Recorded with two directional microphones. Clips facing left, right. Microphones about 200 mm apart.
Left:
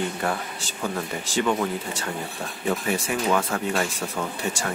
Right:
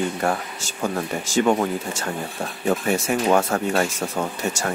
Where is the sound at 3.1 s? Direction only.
45° right (ahead or behind).